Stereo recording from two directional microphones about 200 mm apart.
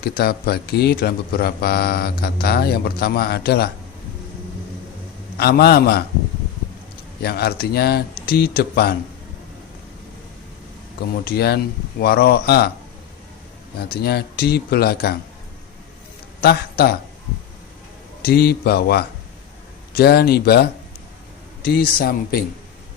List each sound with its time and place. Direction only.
0.0 s speech: 50° left (ahead or behind)
5.4 s speech: 55° left (ahead or behind)
7.2 s speech: 50° left (ahead or behind)
11.3 s speech: 50° left (ahead or behind)
13.7 s speech: 50° left (ahead or behind)
16.4 s a man's voice: 50° left (ahead or behind)
18.2 s speech: 50° left (ahead or behind)